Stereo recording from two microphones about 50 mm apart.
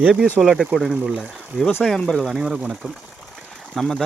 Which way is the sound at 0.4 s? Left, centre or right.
Centre.